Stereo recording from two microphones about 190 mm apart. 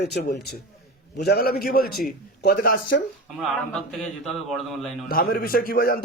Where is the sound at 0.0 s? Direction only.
60° left (ahead or behind).